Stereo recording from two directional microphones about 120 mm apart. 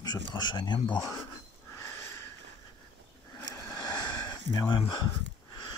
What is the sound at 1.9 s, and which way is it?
Sniff, 20° left (ahead or behind).